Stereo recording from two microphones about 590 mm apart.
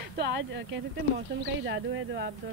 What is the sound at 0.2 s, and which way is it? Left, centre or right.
Speech, centre.